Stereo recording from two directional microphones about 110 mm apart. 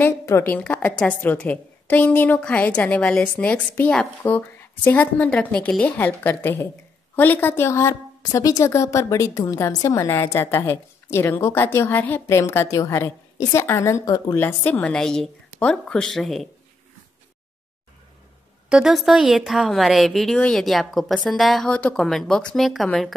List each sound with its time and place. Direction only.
0.0 s a woman's voice: 25° left (ahead or behind)
14.3 s a woman's voice: 15° left (ahead or behind)
18.7 s a woman's voice: 5° right (ahead or behind)